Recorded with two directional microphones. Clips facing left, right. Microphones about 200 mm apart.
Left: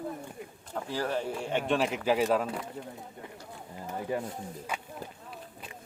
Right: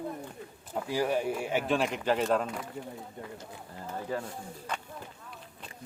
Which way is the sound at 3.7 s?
15° left (ahead or behind).